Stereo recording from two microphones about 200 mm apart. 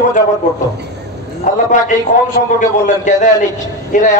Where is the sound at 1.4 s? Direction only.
40° left (ahead or behind).